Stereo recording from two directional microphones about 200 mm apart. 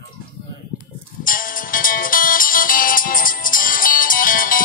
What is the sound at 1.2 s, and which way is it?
Music, 45° left (ahead or behind).